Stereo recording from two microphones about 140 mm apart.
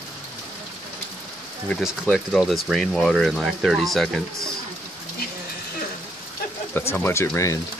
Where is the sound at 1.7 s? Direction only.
10° left (ahead or behind).